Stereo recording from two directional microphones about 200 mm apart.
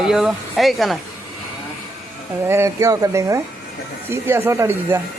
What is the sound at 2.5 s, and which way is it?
Speech, 15° right (ahead or behind).